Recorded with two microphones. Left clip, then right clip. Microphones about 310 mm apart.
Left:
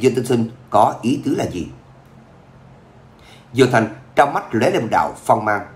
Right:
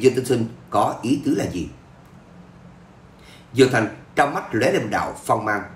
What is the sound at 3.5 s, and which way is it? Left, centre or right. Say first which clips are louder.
Speech: left 2 dB; centre.